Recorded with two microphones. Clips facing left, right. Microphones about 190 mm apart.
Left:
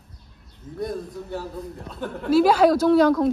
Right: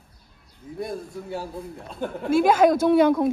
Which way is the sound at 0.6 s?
15° right (ahead or behind).